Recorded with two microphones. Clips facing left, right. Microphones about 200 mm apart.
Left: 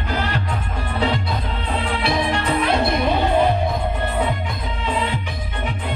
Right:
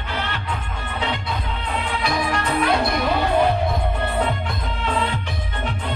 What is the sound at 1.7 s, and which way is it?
Music, 30° left (ahead or behind).